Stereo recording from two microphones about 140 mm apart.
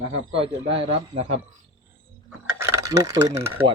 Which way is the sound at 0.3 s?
40° right (ahead or behind).